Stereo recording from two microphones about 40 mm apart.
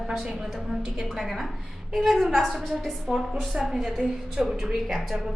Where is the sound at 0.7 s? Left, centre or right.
Centre.